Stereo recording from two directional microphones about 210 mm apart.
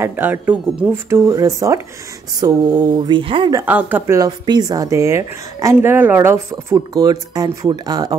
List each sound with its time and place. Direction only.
0.0 s speech: 10° right (ahead or behind)
1.1 s speech: 15° right (ahead or behind)
3.6 s speech: 10° right (ahead or behind)